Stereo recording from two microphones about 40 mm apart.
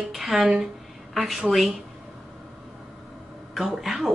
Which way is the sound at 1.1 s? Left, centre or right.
Centre.